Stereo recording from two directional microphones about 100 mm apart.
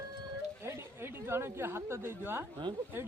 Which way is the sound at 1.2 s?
25° right (ahead or behind).